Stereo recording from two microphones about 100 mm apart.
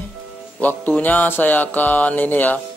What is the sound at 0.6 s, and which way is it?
Speech, 15° left (ahead or behind).